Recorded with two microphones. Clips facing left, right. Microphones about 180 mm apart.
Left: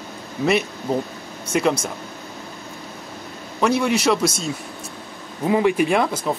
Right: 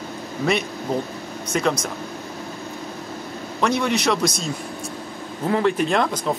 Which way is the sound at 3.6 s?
5° left (ahead or behind).